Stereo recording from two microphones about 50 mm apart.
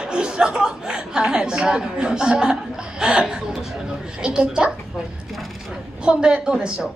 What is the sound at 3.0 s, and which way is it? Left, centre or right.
Speech, centre.